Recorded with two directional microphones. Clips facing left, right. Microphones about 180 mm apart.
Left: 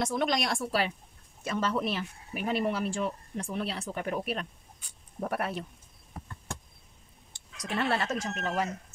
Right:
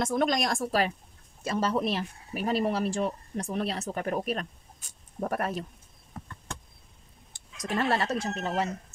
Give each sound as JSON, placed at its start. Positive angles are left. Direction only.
{"t": 0.0, "sound": "speech", "side_deg": -45}
{"t": 7.3, "sound": "speech", "side_deg": -40}